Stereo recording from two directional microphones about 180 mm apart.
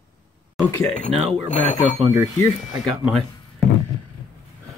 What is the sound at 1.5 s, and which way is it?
Speech, 45° left (ahead or behind).